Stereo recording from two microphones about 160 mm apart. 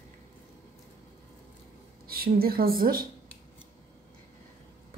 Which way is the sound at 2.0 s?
70° right (ahead or behind).